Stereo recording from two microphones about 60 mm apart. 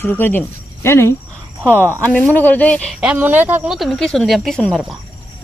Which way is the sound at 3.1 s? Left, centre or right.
Right.